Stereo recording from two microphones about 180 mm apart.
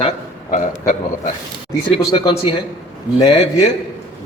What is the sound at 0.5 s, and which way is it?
Speech, 45° left (ahead or behind).